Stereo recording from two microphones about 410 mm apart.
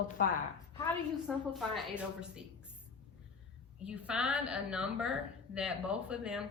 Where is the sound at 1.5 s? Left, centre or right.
Centre.